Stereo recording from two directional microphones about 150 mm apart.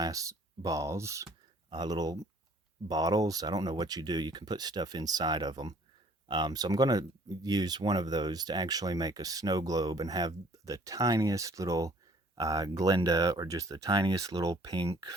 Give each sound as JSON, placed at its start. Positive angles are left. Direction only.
{"t": 0.0, "sound": "speech", "side_deg": -20}